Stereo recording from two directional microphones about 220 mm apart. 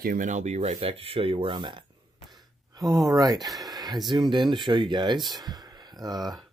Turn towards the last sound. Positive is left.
turn(degrees=-15)  # may be behind; listen again after turning